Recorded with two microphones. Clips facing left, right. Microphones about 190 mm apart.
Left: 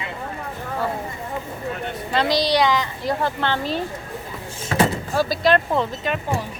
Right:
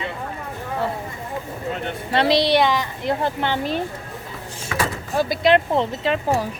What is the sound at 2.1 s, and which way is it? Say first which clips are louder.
Speech: right 2 dB; 25° right (ahead or behind).